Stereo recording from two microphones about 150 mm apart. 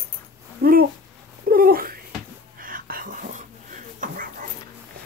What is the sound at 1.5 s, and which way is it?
Cat, 75° right (ahead or behind).